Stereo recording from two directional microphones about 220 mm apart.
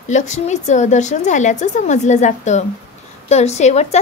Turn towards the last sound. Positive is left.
turn(degrees=30)  # may be behind; listen again after turning